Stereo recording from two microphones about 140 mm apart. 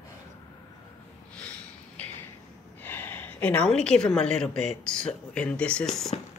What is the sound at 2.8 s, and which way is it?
A woman's voice, 15° left (ahead or behind).